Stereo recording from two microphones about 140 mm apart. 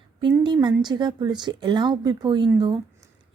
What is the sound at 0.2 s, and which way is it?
A woman's voice, 35° right (ahead or behind).